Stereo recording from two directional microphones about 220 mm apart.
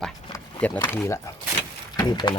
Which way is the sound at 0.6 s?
10° left (ahead or behind).